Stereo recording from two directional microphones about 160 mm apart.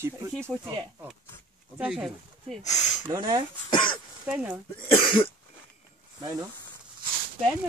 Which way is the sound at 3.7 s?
30° left (ahead or behind).